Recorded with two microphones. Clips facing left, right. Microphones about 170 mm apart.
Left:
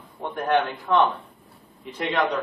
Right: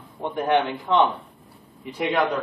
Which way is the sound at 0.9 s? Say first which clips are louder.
Right 1 dB; 25° right (ahead or behind).